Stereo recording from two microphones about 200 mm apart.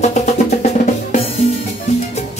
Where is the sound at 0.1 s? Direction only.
35° left (ahead or behind).